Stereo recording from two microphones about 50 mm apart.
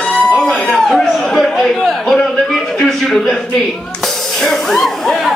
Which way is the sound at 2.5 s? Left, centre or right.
Centre.